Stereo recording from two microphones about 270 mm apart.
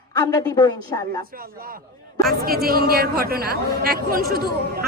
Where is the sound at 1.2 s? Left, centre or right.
Right.